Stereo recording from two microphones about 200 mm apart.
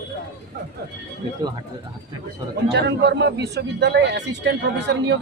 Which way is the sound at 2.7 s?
55° right (ahead or behind).